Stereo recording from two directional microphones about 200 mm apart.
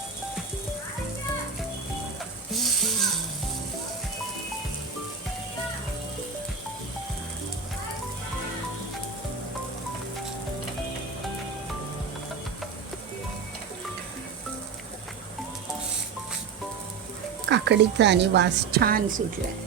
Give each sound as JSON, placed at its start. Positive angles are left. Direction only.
{"t": 2.5, "sound": "music", "side_deg": 0}
{"t": 17.5, "sound": "a woman's voice", "side_deg": -60}